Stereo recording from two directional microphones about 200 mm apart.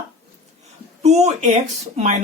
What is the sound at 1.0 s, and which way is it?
Speech, 35° right (ahead or behind).